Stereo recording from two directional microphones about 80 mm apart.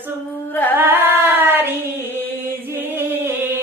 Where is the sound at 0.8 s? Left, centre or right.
Right.